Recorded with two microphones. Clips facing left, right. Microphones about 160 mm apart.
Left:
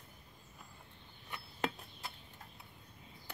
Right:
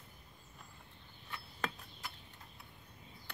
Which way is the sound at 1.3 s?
25° left (ahead or behind).